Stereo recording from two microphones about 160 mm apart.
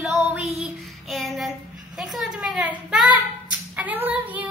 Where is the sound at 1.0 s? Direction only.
Centre (ahead or behind).